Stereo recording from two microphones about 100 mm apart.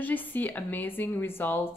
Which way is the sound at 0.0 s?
15° left (ahead or behind).